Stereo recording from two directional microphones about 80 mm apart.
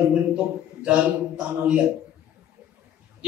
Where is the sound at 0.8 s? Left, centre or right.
Centre.